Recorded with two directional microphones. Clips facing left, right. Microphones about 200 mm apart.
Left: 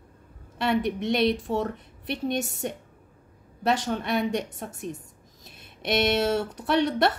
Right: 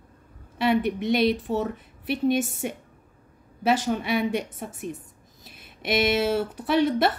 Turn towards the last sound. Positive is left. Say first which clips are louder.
# right 1 dB
turn(degrees=0)  # may be behind; listen again after turning